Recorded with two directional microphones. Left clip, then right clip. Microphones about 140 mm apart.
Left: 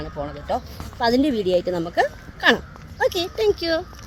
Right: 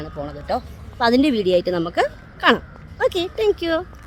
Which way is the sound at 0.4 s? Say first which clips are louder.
Right 3 dB; 30° right (ahead or behind).